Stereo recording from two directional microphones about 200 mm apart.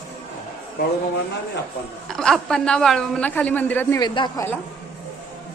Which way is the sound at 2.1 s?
5° left (ahead or behind).